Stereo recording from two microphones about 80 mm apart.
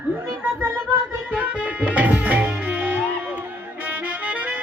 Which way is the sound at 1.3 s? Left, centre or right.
Centre.